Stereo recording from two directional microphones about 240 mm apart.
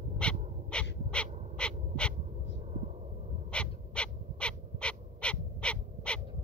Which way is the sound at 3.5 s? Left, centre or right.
Centre.